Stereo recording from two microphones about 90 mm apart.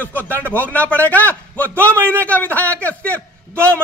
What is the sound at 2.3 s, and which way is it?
Speech, 20° left (ahead or behind).